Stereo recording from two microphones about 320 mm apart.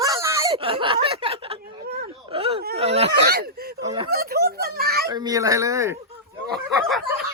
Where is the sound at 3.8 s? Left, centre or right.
Centre.